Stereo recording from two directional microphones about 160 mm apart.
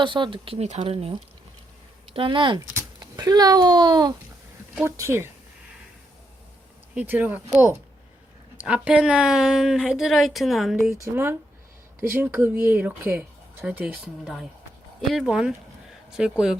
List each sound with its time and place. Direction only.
0.0 s speech: 30° right (ahead or behind)
4.9 s speech: 15° right (ahead or behind)
6.9 s a woman's voice: 10° right (ahead or behind)
11.0 s a woman's voice: 15° right (ahead or behind)